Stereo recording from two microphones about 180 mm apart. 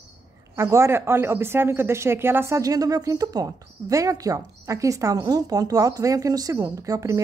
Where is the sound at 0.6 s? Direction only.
15° right (ahead or behind).